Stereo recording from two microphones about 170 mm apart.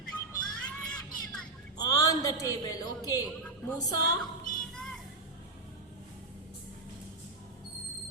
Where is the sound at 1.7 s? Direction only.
20° left (ahead or behind).